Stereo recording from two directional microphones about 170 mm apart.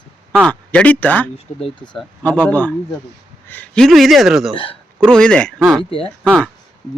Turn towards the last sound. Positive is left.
turn(degrees=5)  # may be behind; listen again after turning